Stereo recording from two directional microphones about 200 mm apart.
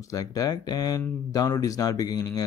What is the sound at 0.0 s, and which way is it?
Speech, 15° left (ahead or behind).